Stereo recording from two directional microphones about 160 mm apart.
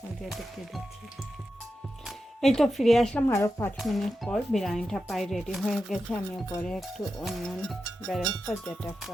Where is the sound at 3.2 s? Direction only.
15° left (ahead or behind).